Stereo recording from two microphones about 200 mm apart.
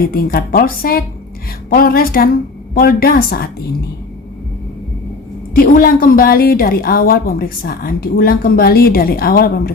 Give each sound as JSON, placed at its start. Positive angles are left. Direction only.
{"t": 0.0, "sound": "a woman's voice", "side_deg": 50}
{"t": 5.5, "sound": "a woman's voice", "side_deg": 45}